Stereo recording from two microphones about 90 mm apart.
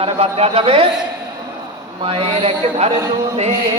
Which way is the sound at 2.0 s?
90° right.